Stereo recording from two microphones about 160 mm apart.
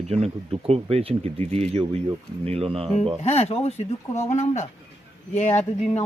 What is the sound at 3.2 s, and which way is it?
Speech, 40° left (ahead or behind).